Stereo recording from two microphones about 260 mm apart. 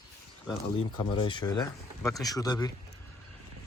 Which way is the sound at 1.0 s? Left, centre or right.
Centre.